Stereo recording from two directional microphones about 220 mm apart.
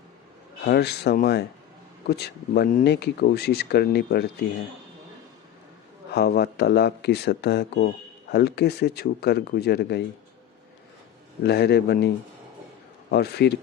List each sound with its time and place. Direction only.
0.6 s speech: 45° left (ahead or behind)
6.1 s speech: 45° left (ahead or behind)
11.4 s speech: 50° left (ahead or behind)